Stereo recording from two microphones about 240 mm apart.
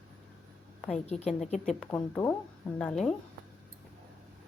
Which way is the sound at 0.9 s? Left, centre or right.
Left.